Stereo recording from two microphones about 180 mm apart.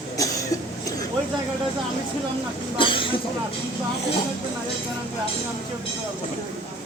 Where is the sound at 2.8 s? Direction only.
30° left (ahead or behind).